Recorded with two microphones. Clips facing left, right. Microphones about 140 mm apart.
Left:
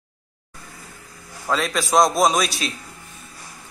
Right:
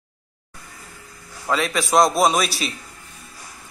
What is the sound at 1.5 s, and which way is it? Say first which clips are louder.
Speech: right 1 dB; centre (ahead or behind).